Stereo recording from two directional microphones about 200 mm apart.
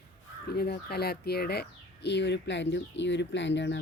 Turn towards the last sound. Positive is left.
turn(degrees=60)  # may be behind; listen again after turning